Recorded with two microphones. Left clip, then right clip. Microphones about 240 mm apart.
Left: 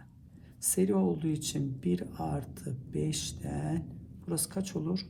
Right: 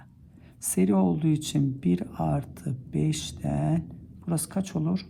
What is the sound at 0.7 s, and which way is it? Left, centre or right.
Speech, right.